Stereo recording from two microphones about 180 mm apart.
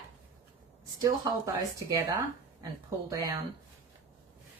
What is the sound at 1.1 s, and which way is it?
A woman's voice, 20° right (ahead or behind).